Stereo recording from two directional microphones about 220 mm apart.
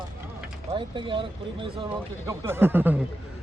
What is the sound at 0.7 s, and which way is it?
Speech, 20° right (ahead or behind).